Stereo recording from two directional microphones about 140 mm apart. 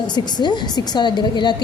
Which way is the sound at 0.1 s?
30° left (ahead or behind).